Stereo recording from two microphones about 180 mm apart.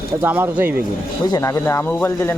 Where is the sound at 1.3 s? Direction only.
15° left (ahead or behind).